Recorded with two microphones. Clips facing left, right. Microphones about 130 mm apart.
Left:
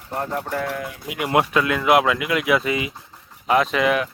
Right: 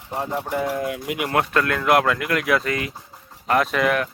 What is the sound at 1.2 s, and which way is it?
Speech, 10° left (ahead or behind).